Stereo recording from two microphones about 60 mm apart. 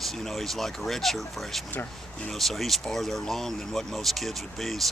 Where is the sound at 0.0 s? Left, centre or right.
Centre.